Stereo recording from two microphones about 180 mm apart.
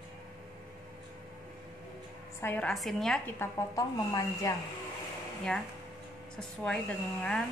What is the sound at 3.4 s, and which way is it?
Speech, 20° left (ahead or behind).